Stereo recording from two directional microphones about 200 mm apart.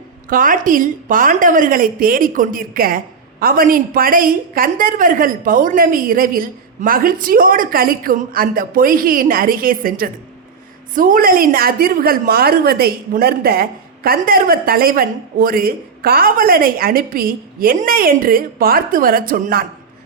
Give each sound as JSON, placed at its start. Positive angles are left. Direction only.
{"t": 0.3, "sound": "a woman's voice", "side_deg": -45}